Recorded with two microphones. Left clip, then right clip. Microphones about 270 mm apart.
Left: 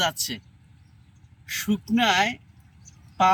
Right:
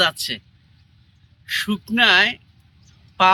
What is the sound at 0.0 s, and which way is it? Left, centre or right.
Speech, centre.